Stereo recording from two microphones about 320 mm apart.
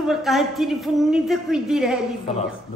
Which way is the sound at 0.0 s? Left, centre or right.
Centre.